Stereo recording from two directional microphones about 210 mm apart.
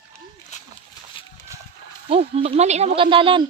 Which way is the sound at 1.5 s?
15° right (ahead or behind).